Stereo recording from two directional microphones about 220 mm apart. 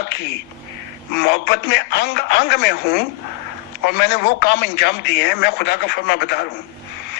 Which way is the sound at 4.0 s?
50° left (ahead or behind).